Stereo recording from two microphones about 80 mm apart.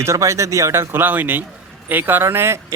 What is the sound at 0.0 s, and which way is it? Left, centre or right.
Speech, right.